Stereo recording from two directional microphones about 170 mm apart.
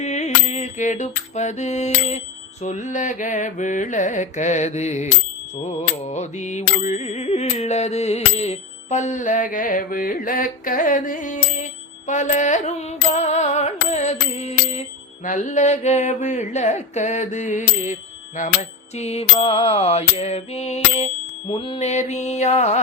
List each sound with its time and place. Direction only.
0.0 s mantra: 45° left (ahead or behind)
18.9 s mantra: 40° left (ahead or behind)
21.5 s music: 30° left (ahead or behind)
21.8 s mantra: 40° left (ahead or behind)